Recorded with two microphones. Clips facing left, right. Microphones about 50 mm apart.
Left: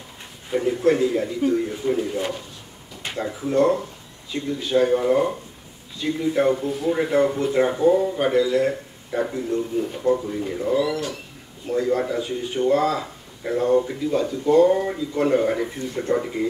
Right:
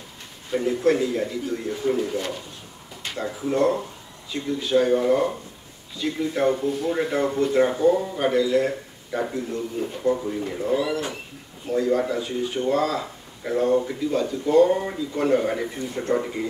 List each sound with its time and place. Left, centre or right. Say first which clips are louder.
0.5 s speech: left 1 dB; centre
3.0 s a sound: left 2 dB; centre
3.3 s speech: left 2 dB; centre
10.7 s speech: left 2 dB; centre
11.6 s speech: even; centre